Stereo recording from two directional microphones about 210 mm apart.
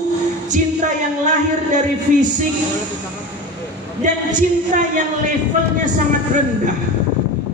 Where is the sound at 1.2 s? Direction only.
35° right (ahead or behind).